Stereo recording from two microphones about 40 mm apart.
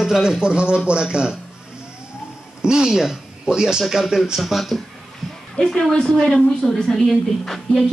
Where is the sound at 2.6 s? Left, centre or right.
Centre.